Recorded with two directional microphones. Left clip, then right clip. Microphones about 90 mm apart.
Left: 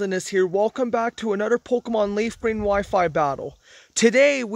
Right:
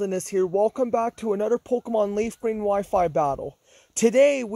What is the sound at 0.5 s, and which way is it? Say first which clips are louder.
Speech: even; 55° left (ahead or behind).